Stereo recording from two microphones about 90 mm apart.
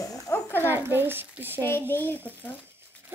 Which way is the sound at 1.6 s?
25° left (ahead or behind).